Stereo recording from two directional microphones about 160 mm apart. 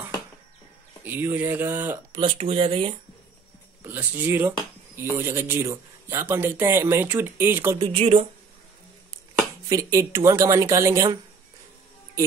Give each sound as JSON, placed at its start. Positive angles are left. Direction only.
{"t": 1.0, "sound": "speech", "side_deg": -15}
{"t": 2.1, "sound": "speech", "side_deg": -35}
{"t": 3.8, "sound": "speech", "side_deg": -10}
{"t": 7.8, "sound": "speech", "side_deg": -35}
{"t": 9.7, "sound": "speech", "side_deg": -20}